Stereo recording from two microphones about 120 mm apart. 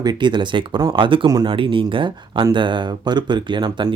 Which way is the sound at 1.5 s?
45° right (ahead or behind).